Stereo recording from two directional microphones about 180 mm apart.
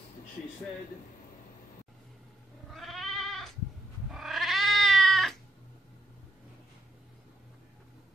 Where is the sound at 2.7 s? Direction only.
Centre (ahead or behind).